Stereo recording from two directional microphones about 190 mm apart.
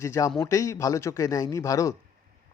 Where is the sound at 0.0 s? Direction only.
15° left (ahead or behind).